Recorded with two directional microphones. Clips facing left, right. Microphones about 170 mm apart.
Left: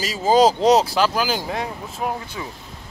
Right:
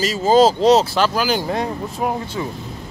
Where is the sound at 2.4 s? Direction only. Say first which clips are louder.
Right 7 dB; 30° right (ahead or behind).